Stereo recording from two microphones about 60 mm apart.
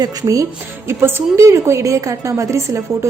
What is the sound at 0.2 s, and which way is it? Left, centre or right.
Speech, right.